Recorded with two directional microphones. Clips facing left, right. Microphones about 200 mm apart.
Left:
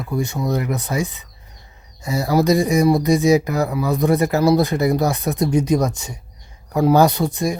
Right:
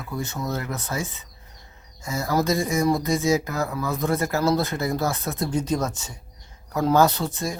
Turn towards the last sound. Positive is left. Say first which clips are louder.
# left 6 dB
turn(degrees=15)  # may be behind; listen again after turning